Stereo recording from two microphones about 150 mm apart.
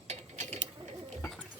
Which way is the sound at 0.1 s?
50° right (ahead or behind).